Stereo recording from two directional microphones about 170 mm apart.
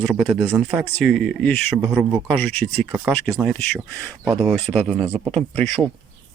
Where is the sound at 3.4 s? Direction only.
5° left (ahead or behind).